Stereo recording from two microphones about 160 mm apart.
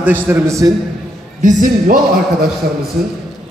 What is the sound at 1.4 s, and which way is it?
Speech, 55° right (ahead or behind).